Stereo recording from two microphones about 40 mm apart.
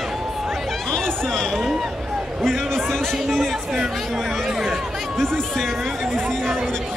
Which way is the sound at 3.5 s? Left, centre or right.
Centre.